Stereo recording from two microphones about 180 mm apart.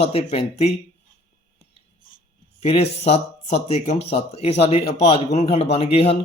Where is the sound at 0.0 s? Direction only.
35° left (ahead or behind).